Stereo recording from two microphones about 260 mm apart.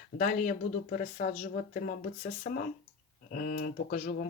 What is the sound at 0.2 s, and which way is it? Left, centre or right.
Speech, left.